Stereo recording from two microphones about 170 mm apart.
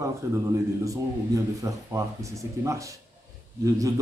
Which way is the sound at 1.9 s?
15° right (ahead or behind).